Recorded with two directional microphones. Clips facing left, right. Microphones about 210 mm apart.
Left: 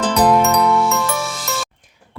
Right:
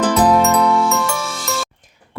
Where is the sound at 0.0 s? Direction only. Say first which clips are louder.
Right 1 dB; centre (ahead or behind).